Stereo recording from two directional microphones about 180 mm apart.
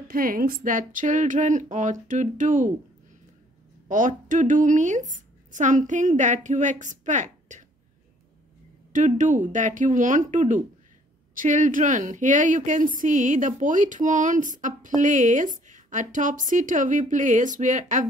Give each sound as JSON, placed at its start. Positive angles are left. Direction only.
{"t": 0.1, "sound": "a woman's voice", "side_deg": -55}
{"t": 3.9, "sound": "a woman's voice", "side_deg": -45}
{"t": 8.9, "sound": "a woman's voice", "side_deg": -45}